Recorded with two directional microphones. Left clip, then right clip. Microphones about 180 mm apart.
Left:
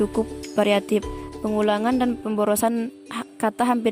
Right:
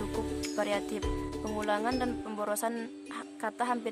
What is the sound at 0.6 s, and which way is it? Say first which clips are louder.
Speech: left 13 dB; 40° left (ahead or behind).